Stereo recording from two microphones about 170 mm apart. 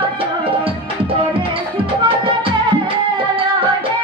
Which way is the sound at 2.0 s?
30° right (ahead or behind).